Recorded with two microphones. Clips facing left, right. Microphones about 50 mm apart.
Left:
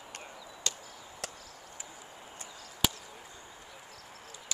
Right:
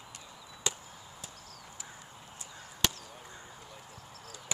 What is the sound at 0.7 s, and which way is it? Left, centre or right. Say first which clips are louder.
Chop: right 2 dB; centre.